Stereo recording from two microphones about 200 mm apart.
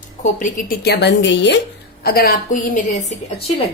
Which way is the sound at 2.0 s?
50° left (ahead or behind).